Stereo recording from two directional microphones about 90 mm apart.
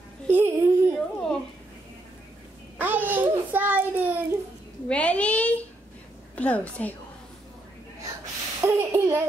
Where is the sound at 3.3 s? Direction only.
20° right (ahead or behind).